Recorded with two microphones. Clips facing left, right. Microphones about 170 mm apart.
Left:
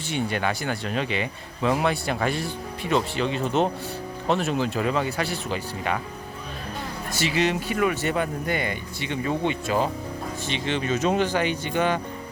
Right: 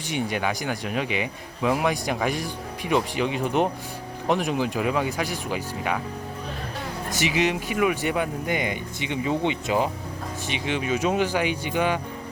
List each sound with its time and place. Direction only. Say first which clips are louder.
0.1 s speech: even; 15° right (ahead or behind)
7.1 s speech: even; 15° right (ahead or behind)